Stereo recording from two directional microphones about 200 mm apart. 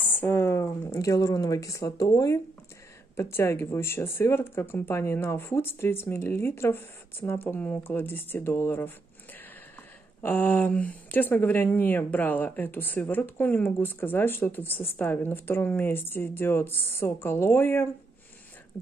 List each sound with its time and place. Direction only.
0.2 s speech: 10° left (ahead or behind)
10.2 s speech: 10° left (ahead or behind)